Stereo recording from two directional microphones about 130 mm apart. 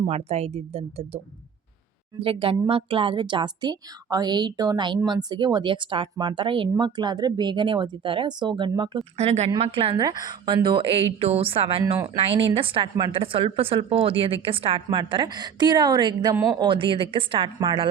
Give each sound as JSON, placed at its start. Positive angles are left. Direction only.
{"t": 0.1, "sound": "a woman's voice", "side_deg": -55}
{"t": 9.1, "sound": "speech", "side_deg": -55}
{"t": 9.6, "sound": "a woman's voice", "side_deg": -45}